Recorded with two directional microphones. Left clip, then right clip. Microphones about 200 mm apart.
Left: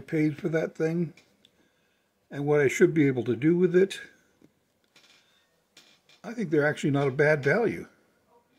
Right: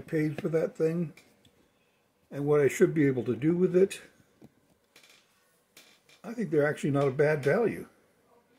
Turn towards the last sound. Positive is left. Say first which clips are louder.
# left 2 dB
turn(degrees=35)  # may be behind; listen again after turning